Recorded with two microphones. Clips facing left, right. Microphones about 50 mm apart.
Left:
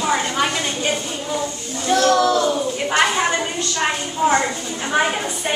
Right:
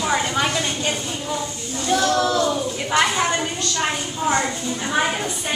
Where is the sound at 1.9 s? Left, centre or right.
Left.